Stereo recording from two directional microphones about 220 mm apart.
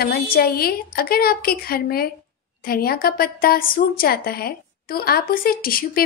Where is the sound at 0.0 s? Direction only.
45° left (ahead or behind).